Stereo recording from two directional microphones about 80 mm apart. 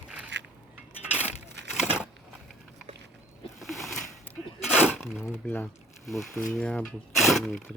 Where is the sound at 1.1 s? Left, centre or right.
Centre.